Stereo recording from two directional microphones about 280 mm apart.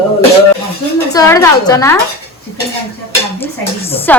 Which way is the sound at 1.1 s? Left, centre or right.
Centre.